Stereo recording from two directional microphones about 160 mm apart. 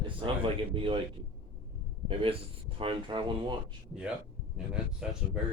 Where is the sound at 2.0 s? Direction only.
35° right (ahead or behind).